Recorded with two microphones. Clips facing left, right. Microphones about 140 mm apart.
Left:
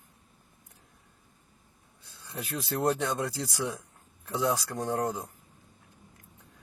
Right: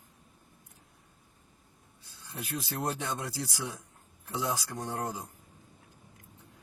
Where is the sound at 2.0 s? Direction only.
65° left (ahead or behind).